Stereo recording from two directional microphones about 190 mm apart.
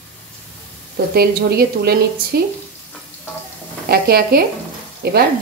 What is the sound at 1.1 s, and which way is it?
Speech, 55° right (ahead or behind).